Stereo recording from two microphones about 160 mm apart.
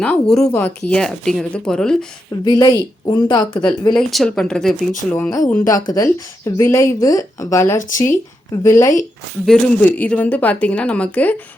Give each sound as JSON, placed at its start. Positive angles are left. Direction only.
{"t": 0.0, "sound": "speech", "side_deg": 5}
{"t": 2.4, "sound": "speech", "side_deg": 25}
{"t": 3.9, "sound": "speech", "side_deg": 5}
{"t": 5.1, "sound": "a woman's voice", "side_deg": 15}
{"t": 7.8, "sound": "speech", "side_deg": 55}
{"t": 8.6, "sound": "a woman's voice", "side_deg": 15}